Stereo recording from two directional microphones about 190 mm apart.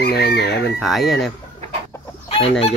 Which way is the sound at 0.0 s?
55° left (ahead or behind).